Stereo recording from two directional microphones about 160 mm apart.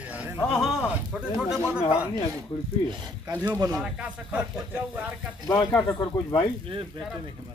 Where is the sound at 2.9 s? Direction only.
20° right (ahead or behind).